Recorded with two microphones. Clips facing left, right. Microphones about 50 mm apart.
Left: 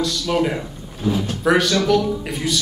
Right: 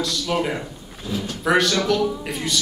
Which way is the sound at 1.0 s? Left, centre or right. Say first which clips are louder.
Left 6 dB; left.